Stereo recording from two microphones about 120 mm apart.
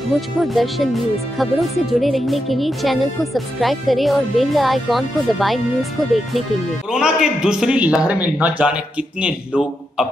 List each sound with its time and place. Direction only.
0.1 s a man's voice: centre (ahead or behind)